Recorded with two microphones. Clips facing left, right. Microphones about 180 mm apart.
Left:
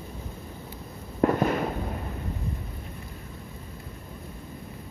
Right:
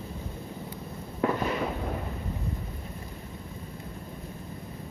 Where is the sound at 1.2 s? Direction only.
45° left (ahead or behind).